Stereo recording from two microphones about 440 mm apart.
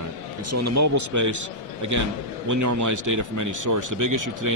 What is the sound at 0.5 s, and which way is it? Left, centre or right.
Speech, right.